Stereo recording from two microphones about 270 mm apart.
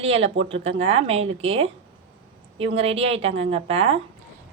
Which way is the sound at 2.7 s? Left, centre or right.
Right.